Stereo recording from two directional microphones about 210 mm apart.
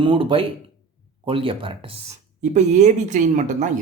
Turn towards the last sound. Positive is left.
turn(degrees=-35)  # may be behind; listen again after turning